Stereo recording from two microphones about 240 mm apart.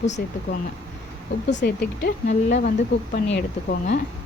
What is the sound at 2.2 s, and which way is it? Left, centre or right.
Speech, left.